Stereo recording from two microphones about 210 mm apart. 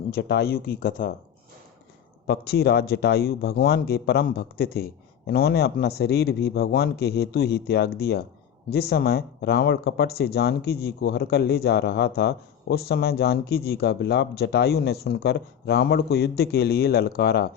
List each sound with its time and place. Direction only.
0.1 s speech: 50° left (ahead or behind)
2.2 s speech: 50° left (ahead or behind)